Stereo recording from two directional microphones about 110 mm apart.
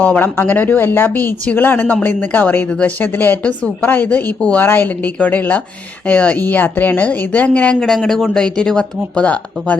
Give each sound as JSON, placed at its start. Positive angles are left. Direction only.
{"t": 0.0, "sound": "speech", "side_deg": 15}